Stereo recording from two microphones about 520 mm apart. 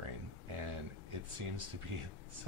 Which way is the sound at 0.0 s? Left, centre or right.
Right.